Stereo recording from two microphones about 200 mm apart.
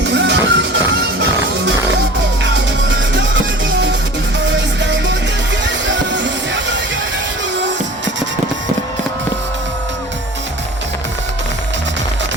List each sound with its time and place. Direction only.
0.0 s music: 60° right (ahead or behind)
2.4 s music: 65° right (ahead or behind)
4.4 s music: 65° right (ahead or behind)
7.6 s a sound: 65° right (ahead or behind)